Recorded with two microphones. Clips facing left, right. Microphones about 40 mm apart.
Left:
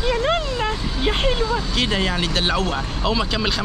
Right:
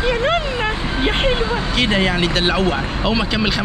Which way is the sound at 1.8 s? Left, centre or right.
Centre.